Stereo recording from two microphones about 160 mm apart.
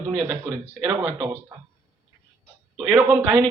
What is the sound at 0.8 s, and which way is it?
Speech, 25° right (ahead or behind).